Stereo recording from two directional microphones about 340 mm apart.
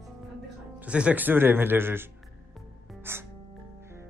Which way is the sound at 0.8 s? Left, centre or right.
Centre.